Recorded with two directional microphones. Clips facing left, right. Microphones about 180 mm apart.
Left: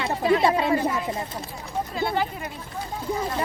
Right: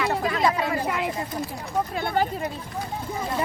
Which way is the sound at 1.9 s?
50° right (ahead or behind).